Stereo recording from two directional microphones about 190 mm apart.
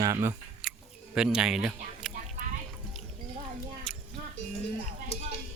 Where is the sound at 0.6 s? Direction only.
5° right (ahead or behind).